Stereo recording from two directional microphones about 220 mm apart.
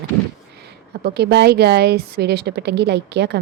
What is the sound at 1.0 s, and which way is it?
A woman's voice, 45° right (ahead or behind).